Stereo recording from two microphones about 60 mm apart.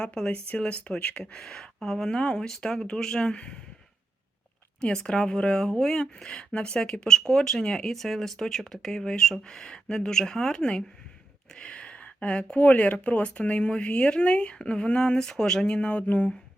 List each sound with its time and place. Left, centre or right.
0.0 s speech: centre
4.8 s speech: centre